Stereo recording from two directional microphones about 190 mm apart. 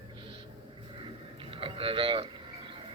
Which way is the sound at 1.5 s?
30° right (ahead or behind).